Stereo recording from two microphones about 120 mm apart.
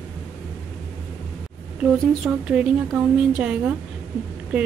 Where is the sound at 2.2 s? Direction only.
10° right (ahead or behind).